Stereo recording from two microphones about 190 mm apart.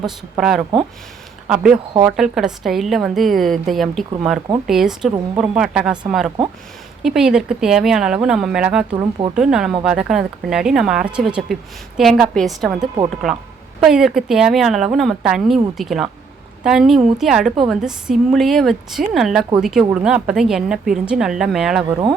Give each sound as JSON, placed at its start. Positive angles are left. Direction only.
{"t": 0.0, "sound": "a woman's voice", "side_deg": 0}
{"t": 9.0, "sound": "speech", "side_deg": -25}
{"t": 9.3, "sound": "a woman's voice", "side_deg": -5}